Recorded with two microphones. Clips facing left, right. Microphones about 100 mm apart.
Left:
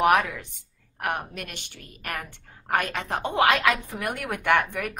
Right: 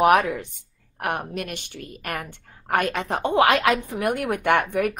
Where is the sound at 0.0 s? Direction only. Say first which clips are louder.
Right 3 dB; 50° right (ahead or behind).